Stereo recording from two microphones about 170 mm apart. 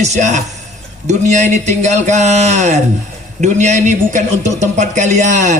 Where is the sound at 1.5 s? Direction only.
45° right (ahead or behind).